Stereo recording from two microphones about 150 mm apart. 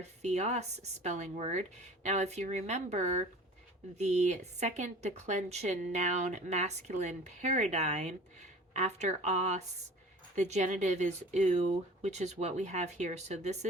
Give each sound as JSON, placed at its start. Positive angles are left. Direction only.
{"t": 0.0, "sound": "speech", "side_deg": -50}